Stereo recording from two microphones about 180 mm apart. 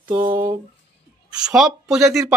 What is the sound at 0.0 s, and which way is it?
Speech, 15° right (ahead or behind).